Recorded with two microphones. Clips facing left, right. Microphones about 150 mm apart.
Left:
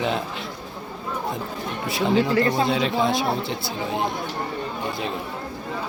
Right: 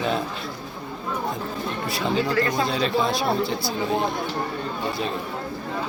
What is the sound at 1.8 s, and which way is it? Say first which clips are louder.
Speech: left 4 dB; 20° left (ahead or behind).